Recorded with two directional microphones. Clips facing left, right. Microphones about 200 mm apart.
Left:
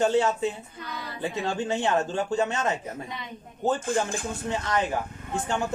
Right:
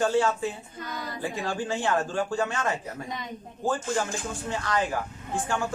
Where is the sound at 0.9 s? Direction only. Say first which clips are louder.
Right 2 dB; 45° right (ahead or behind).